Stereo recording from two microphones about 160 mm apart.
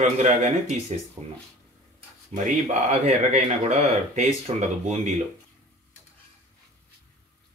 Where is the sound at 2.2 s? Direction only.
45° right (ahead or behind).